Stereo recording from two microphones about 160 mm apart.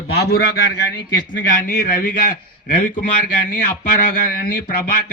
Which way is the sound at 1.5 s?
55° left (ahead or behind).